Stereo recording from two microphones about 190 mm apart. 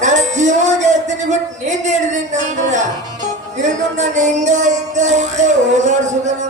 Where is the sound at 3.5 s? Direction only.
40° right (ahead or behind).